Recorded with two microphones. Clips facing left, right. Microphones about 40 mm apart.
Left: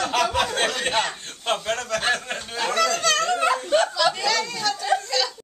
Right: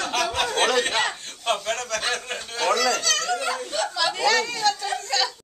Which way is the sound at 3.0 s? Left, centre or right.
Left.